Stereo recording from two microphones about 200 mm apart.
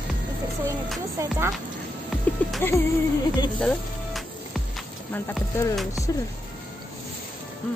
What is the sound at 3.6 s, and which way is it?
Speech, 5° left (ahead or behind).